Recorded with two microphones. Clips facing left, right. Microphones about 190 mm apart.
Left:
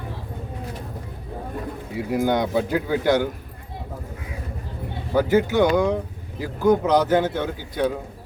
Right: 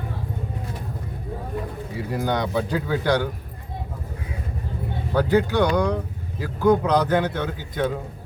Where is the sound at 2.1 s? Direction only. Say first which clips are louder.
Left 4 dB; 10° left (ahead or behind).